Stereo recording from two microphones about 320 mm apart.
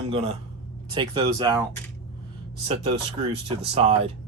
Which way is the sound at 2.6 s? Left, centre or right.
Centre.